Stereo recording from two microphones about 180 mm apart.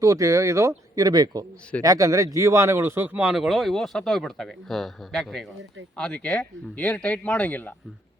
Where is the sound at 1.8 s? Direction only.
20° right (ahead or behind); by 7.8 s 10° left (ahead or behind).